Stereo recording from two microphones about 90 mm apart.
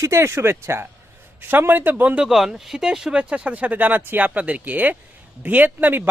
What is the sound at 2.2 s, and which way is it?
Speech, 5° right (ahead or behind).